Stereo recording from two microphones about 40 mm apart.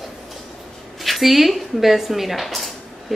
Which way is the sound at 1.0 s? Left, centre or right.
Centre.